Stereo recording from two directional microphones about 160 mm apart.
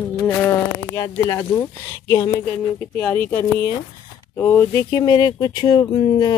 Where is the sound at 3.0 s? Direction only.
15° left (ahead or behind).